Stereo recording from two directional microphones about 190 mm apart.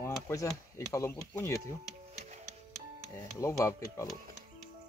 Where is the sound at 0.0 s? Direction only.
15° left (ahead or behind).